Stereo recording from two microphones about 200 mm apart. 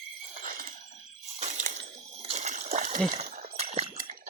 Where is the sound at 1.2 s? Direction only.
35° right (ahead or behind).